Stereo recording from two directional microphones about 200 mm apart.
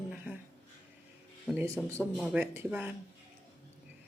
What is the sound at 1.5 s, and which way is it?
Speech, centre (ahead or behind).